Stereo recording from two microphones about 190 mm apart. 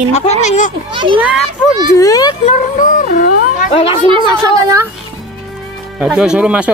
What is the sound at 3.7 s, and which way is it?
Speech, 30° left (ahead or behind).